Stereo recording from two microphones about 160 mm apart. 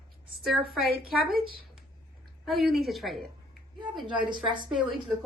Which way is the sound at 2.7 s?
Centre (ahead or behind).